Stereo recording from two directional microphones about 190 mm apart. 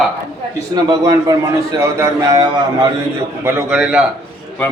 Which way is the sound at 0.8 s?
20° right (ahead or behind).